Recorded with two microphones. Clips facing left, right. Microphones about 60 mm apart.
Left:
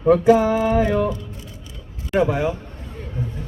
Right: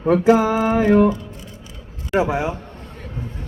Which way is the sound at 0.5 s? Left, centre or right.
Right.